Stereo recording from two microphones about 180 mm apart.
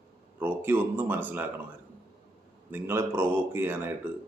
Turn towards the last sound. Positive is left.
turn(degrees=-10)  # may be behind; listen again after turning